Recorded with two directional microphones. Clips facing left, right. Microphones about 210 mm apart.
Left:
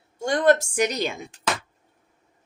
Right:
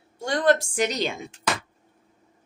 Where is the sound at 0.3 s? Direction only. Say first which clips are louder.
Left 2 dB; 45° left (ahead or behind).